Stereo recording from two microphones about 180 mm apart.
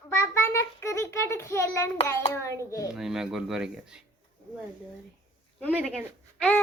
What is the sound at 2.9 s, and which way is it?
Speech, 5° right (ahead or behind).